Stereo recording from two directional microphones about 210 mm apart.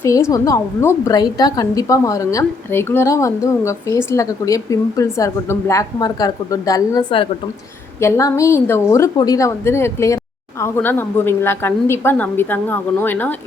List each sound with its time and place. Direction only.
0.0 s a woman's voice: 15° left (ahead or behind)